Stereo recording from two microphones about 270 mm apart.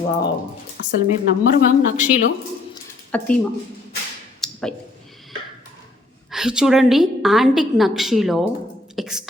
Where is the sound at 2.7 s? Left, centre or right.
Centre.